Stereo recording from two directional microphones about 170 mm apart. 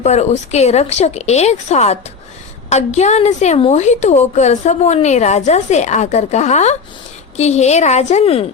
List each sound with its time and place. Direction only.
0.0 s a woman's voice: 40° left (ahead or behind)